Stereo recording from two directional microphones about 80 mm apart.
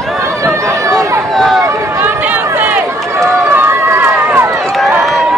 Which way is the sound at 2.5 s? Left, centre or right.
Right.